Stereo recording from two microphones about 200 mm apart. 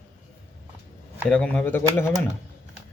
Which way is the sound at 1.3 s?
5° left (ahead or behind).